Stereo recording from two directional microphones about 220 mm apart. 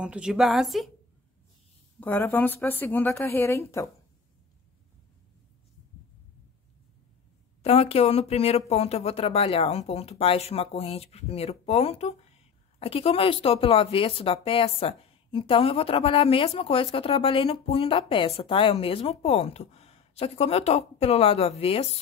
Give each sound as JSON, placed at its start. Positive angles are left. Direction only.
{"t": 0.0, "sound": "a woman's voice", "side_deg": -5}
{"t": 2.0, "sound": "a woman's voice", "side_deg": 10}
{"t": 7.6, "sound": "speech", "side_deg": 25}